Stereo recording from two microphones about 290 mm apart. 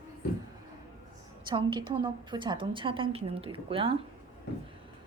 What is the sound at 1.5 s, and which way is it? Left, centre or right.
A woman's voice, centre.